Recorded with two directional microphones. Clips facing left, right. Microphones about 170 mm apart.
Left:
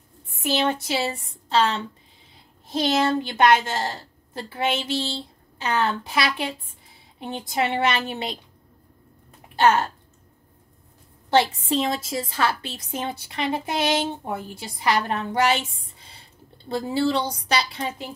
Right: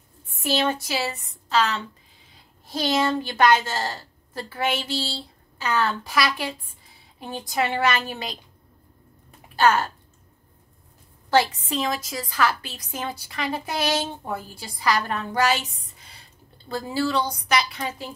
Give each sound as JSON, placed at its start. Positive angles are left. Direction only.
{"t": 0.4, "sound": "a woman's voice", "side_deg": 20}
{"t": 9.6, "sound": "speech", "side_deg": 25}
{"t": 11.2, "sound": "a woman's voice", "side_deg": 20}